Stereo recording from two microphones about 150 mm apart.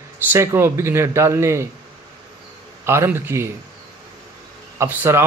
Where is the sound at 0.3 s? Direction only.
15° right (ahead or behind).